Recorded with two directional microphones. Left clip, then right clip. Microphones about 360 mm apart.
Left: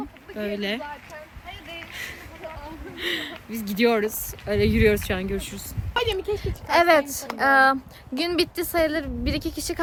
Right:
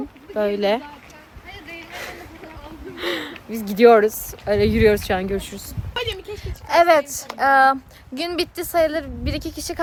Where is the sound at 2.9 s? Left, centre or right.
Centre.